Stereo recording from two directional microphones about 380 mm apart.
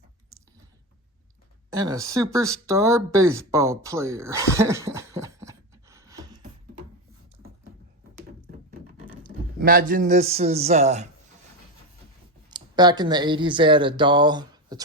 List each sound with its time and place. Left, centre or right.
1.8 s speech: centre
9.2 s a man's voice: right
12.5 s speech: centre